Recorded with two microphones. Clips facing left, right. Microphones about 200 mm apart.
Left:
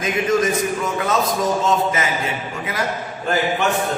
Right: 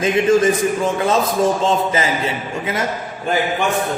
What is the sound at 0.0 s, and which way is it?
A man's voice, 30° right (ahead or behind).